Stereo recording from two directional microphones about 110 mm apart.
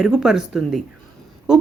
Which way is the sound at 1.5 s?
5° right (ahead or behind).